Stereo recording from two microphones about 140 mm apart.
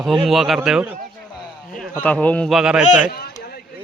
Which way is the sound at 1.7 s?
10° left (ahead or behind).